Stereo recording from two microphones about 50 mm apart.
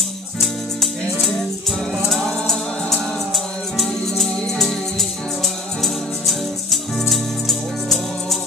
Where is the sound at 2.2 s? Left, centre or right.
Centre.